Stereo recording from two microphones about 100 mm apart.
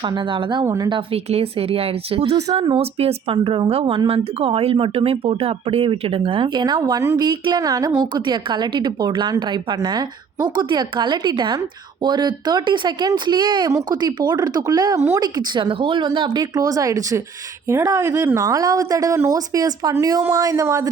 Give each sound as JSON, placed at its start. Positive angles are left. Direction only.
{"t": 0.0, "sound": "a woman's voice", "side_deg": -55}
{"t": 1.1, "sound": "speech", "side_deg": -75}
{"t": 2.7, "sound": "speech", "side_deg": -85}
{"t": 3.3, "sound": "a woman's voice", "side_deg": -55}